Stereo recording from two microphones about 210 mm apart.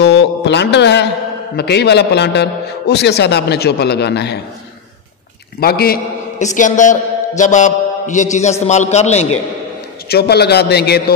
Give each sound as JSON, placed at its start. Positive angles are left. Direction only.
{"t": 0.0, "sound": "a sound", "side_deg": 55}
{"t": 1.6, "sound": "a man's voice", "side_deg": 50}
{"t": 5.6, "sound": "a man's voice", "side_deg": 45}
{"t": 6.4, "sound": "a man's voice", "side_deg": 35}
{"t": 10.0, "sound": "a man's voice", "side_deg": 50}